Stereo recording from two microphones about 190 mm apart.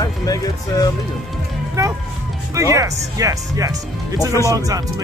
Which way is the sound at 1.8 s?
15° right (ahead or behind).